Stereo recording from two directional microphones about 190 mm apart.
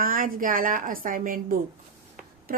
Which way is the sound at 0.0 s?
45° right (ahead or behind).